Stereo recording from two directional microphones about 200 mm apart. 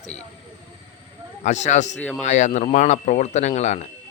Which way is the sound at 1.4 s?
35° left (ahead or behind).